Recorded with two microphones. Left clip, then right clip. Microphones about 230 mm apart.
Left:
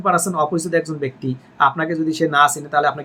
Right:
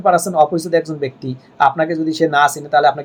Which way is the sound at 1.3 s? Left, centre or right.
Left.